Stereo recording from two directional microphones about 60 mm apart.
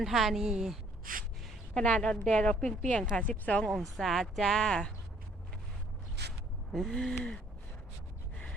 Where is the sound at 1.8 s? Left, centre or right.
Centre.